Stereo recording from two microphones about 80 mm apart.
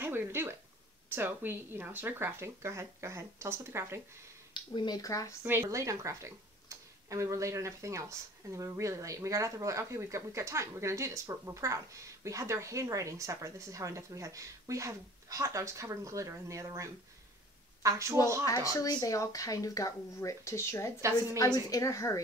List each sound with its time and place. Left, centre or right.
0.0 s a sound: right
1.0 s speech: right
4.6 s speech: left
4.9 s speech: left
5.4 s speech: right
18.5 s speech: left